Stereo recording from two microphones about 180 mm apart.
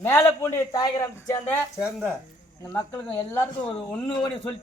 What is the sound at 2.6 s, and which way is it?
A man's voice, 15° left (ahead or behind).